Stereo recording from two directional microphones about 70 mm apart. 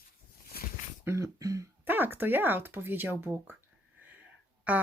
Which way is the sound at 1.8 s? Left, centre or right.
Right.